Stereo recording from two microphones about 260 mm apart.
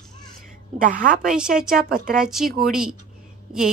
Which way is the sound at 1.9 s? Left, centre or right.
Right.